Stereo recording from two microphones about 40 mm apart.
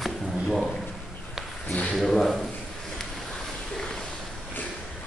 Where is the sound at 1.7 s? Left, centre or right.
Left.